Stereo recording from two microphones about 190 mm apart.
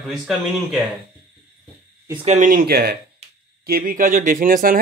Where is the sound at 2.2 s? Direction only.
45° right (ahead or behind).